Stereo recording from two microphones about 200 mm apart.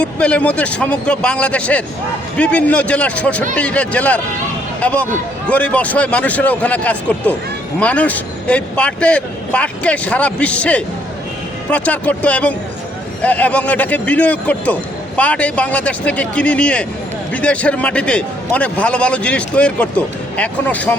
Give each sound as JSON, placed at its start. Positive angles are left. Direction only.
{"t": 0.0, "sound": "a man's voice", "side_deg": 5}